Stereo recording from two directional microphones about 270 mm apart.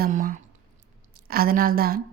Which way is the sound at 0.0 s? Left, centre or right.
Right.